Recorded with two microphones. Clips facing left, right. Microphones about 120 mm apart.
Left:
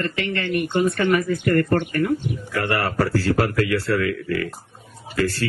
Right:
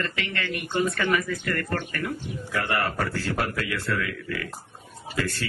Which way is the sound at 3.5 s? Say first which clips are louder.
Left 8 dB; 35° left (ahead or behind).